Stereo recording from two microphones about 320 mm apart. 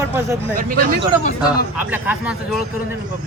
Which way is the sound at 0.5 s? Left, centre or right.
Right.